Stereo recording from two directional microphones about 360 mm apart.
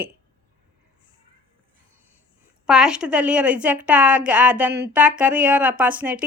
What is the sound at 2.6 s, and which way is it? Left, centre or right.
Speech, centre.